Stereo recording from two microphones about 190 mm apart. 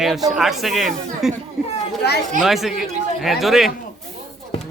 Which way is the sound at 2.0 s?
60° left (ahead or behind).